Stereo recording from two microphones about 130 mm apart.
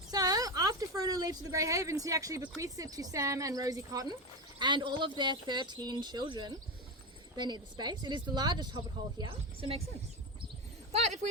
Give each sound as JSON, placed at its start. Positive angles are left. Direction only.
{"t": 0.1, "sound": "a woman's voice", "side_deg": -30}
{"t": 11.0, "sound": "speech", "side_deg": -60}